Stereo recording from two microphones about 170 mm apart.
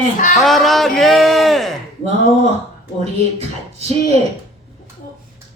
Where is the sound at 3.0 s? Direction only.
40° right (ahead or behind).